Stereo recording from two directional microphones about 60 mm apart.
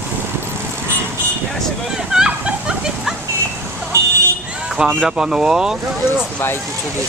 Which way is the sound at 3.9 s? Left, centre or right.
Right.